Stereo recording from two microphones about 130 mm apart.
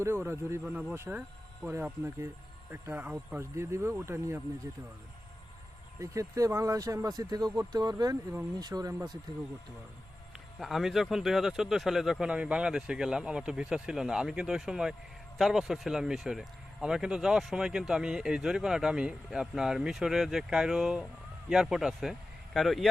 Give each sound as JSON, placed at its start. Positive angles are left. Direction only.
{"t": 0.0, "sound": "speech", "side_deg": -20}
{"t": 0.6, "sound": "speech", "side_deg": -10}
{"t": 0.9, "sound": "speech", "side_deg": -20}
{"t": 6.0, "sound": "speech", "side_deg": -25}
{"t": 10.6, "sound": "speech", "side_deg": 0}